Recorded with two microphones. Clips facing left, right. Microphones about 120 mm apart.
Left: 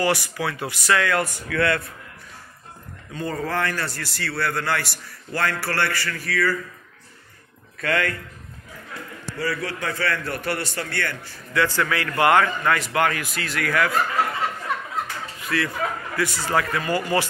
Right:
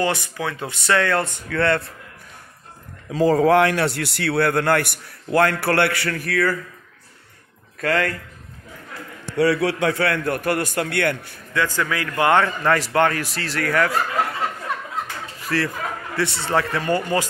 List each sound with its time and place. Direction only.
0.0 s speech: 20° right (ahead or behind)
3.1 s a man's voice: 90° right; by 6.5 s 55° right (ahead or behind)
7.8 s speech: 35° right (ahead or behind)
9.4 s a man's voice: 75° right (ahead or behind); by 11.3 s 60° right (ahead or behind)
11.5 s speech: 15° right (ahead or behind); by 13.9 s 35° right (ahead or behind)
15.4 s speech: 35° right (ahead or behind)